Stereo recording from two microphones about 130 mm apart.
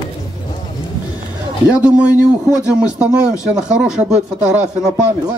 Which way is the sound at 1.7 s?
10° right (ahead or behind).